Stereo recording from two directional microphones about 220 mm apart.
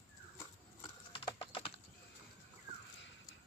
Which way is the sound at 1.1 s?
20° left (ahead or behind).